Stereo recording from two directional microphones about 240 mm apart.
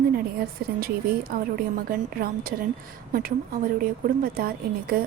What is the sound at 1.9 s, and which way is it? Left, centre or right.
A woman's voice, right.